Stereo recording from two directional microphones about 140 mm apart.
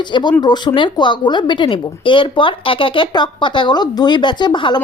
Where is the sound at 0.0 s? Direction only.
30° left (ahead or behind).